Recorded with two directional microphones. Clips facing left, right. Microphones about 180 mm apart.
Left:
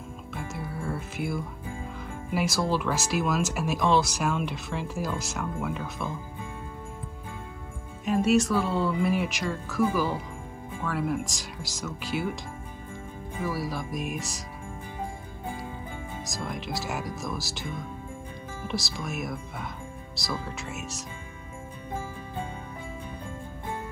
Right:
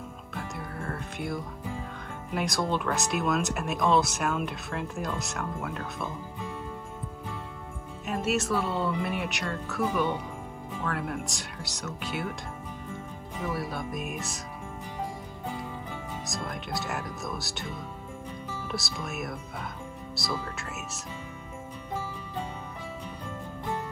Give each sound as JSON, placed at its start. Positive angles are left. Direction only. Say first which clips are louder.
{"t": 0.3, "sound": "music", "louder": "left 2 dB", "side_deg": 5}
{"t": 2.3, "sound": "speech", "louder": "left 2 dB", "side_deg": 0}
{"t": 8.0, "sound": "speech", "louder": "left 6 dB", "side_deg": 0}
{"t": 13.5, "sound": "speech", "louder": "left 1 dB", "side_deg": 0}
{"t": 16.3, "sound": "speech", "louder": "left 2 dB", "side_deg": 0}
{"t": 18.7, "sound": "speech", "louder": "left 4 dB", "side_deg": 0}